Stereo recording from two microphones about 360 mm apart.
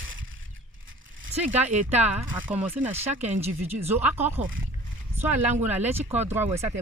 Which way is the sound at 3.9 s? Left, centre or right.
Centre.